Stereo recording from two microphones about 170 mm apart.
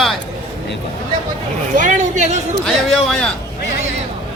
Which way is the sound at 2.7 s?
Centre (ahead or behind).